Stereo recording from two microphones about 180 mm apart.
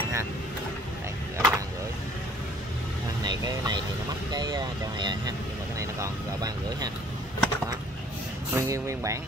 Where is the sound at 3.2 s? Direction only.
25° right (ahead or behind).